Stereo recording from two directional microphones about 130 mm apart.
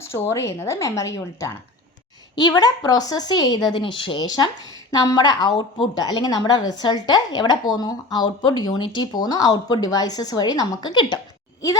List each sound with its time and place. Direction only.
0.1 s a woman's voice: 20° left (ahead or behind)